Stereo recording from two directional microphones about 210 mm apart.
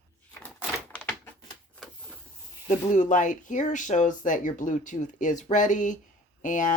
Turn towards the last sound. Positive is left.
turn(degrees=40)  # may be behind; listen again after turning